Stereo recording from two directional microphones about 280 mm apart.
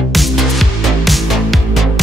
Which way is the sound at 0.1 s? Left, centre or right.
Centre.